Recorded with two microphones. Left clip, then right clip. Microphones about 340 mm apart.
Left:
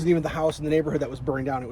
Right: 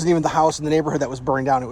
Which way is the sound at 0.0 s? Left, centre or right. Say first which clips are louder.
Right 6 dB; centre.